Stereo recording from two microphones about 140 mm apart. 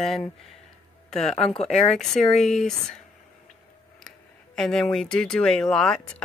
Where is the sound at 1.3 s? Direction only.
50° left (ahead or behind).